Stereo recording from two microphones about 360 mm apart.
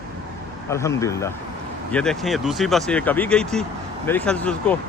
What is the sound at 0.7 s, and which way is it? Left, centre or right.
Speech, centre.